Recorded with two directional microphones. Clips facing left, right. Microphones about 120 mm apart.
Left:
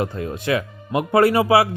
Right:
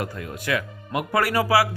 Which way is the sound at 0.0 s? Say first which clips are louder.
Left 6 dB; 25° left (ahead or behind).